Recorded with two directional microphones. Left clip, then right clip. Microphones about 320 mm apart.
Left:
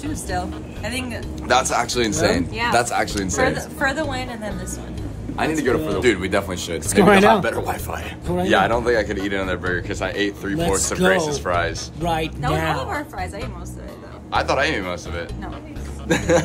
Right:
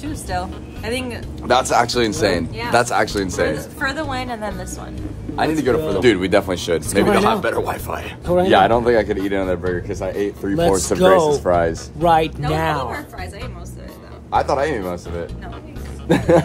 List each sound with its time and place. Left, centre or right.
0.0 s speech: centre
1.5 s speech: centre
5.3 s speech: right
7.2 s speech: centre
10.4 s speech: centre
14.3 s speech: centre